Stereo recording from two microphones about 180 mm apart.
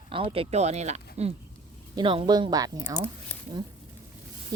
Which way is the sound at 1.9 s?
25° right (ahead or behind).